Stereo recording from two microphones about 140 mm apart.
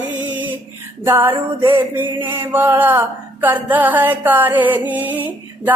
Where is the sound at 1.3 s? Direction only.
35° right (ahead or behind).